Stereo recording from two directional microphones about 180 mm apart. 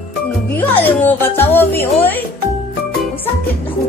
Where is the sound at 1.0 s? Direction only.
10° left (ahead or behind).